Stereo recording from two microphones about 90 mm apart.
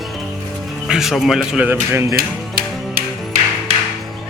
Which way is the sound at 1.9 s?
30° right (ahead or behind).